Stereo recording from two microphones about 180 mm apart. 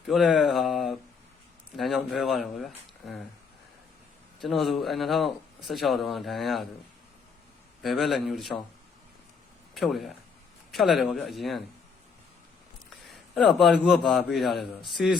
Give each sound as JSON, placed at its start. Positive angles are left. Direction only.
{"t": 0.1, "sound": "a sound", "side_deg": 0}
{"t": 1.7, "sound": "speech", "side_deg": 0}
{"t": 4.4, "sound": "a man's voice", "side_deg": 0}
{"t": 7.8, "sound": "a man's voice", "side_deg": 0}
{"t": 9.7, "sound": "a man's voice", "side_deg": 0}
{"t": 13.1, "sound": "a man's voice", "side_deg": 0}